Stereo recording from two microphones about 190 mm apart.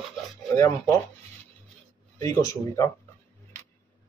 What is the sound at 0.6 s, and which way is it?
Speech, 15° left (ahead or behind).